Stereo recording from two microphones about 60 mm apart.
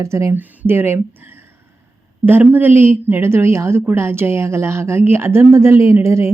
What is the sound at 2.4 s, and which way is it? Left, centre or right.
A woman's voice, right.